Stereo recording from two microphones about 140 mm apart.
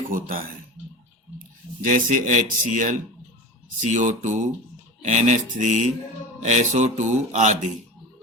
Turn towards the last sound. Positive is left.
turn(degrees=-60)  # may be behind; listen again after turning